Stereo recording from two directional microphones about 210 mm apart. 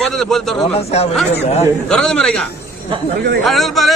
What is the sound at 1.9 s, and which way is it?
A man's voice, 5° left (ahead or behind).